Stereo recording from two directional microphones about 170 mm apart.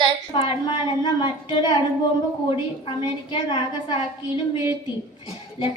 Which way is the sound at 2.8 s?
30° left (ahead or behind).